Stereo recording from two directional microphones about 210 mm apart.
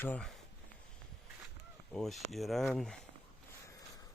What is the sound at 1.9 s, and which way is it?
Speech, centre (ahead or behind).